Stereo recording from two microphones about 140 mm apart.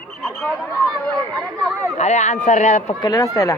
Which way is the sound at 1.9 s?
55° left (ahead or behind).